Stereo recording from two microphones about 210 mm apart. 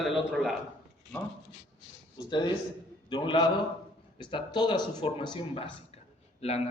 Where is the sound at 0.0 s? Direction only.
Centre (ahead or behind).